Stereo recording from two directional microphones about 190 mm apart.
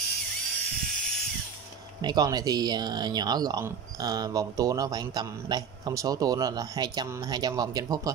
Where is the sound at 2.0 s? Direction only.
20° right (ahead or behind).